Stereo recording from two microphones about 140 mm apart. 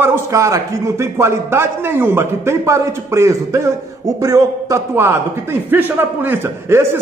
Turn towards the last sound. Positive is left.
turn(degrees=-15)  # may be behind; listen again after turning